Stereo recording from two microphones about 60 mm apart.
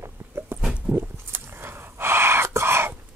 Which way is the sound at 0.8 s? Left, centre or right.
Right.